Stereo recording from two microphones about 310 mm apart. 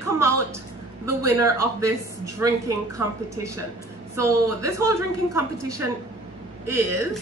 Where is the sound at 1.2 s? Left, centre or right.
Centre.